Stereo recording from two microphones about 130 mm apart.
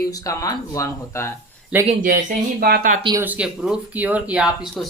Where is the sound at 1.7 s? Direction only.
10° right (ahead or behind).